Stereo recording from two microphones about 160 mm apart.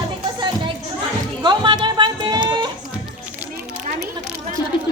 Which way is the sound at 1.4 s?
30° right (ahead or behind).